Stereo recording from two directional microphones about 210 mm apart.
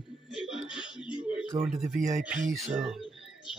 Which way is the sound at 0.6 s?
25° left (ahead or behind).